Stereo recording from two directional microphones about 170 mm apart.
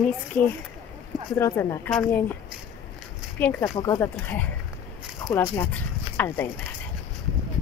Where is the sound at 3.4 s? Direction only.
10° left (ahead or behind).